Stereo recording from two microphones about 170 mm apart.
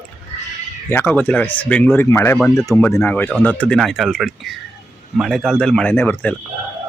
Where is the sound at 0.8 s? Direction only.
15° left (ahead or behind).